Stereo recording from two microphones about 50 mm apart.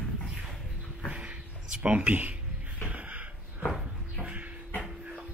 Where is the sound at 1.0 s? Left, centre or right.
Right.